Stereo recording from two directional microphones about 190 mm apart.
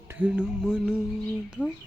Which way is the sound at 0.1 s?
5° right (ahead or behind).